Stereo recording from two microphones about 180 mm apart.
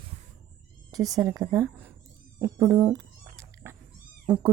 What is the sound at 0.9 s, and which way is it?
A woman's voice, 20° right (ahead or behind).